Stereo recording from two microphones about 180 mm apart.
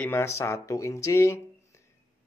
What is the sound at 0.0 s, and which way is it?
Speech, 10° left (ahead or behind).